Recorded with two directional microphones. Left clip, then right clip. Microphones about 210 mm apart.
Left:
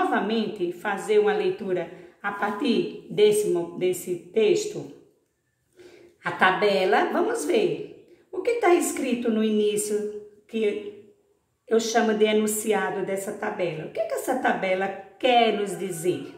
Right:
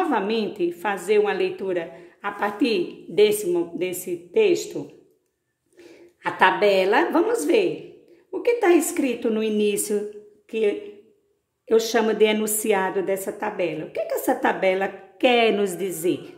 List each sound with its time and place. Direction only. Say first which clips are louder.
0.1 s a woman's voice: right 2 dB; 45° right (ahead or behind)
6.2 s a woman's voice: right 3 dB; 50° right (ahead or behind)
11.7 s a woman's voice: right 2 dB; 50° right (ahead or behind)